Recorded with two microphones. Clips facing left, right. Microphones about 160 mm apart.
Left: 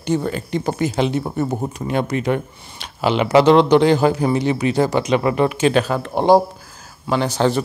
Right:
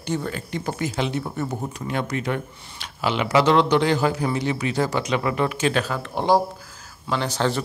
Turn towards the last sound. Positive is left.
turn(degrees=15)  # may be behind; listen again after turning